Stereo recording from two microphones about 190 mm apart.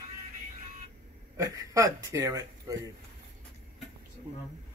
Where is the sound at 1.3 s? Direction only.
15° right (ahead or behind).